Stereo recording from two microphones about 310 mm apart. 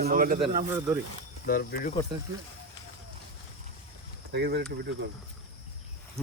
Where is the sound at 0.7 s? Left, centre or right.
Centre.